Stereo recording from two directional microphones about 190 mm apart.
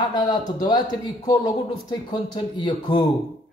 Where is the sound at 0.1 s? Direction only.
25° left (ahead or behind).